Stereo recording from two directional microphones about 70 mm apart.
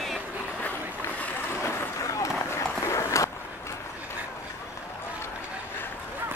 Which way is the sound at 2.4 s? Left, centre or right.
Left.